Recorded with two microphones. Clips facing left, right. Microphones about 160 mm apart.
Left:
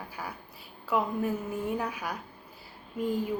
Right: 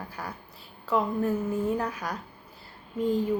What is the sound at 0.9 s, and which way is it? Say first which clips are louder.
Speech: right 3 dB; 10° left (ahead or behind).